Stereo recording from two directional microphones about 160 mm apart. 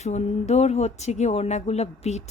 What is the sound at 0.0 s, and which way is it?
A woman's voice, 45° left (ahead or behind).